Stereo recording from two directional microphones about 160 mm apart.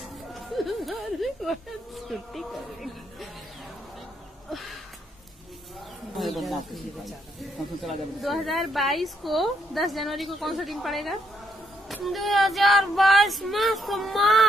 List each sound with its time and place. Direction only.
0.0 s speech: centre (ahead or behind)
4.5 s a sound: centre (ahead or behind)
6.1 s speech: centre (ahead or behind)
7.8 s speech: centre (ahead or behind)